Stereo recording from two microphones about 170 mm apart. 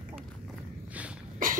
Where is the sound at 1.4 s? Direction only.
55° right (ahead or behind).